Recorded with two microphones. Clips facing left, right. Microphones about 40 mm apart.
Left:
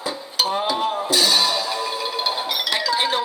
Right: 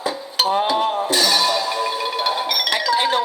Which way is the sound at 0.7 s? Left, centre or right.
Right.